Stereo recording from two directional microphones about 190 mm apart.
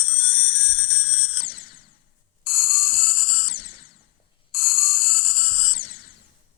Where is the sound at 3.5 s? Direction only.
50° left (ahead or behind).